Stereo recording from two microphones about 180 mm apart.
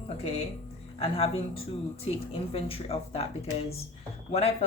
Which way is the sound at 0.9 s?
30° left (ahead or behind).